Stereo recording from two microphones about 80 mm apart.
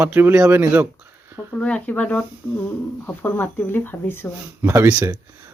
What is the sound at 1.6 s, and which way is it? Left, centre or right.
Speech, centre.